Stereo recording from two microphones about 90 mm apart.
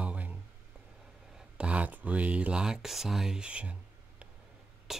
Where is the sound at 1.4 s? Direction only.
15° right (ahead or behind).